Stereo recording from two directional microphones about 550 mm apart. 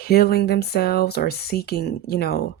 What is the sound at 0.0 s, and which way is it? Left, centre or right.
Speech, centre.